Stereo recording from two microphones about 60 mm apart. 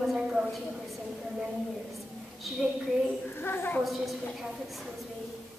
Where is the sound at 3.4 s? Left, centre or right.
Left.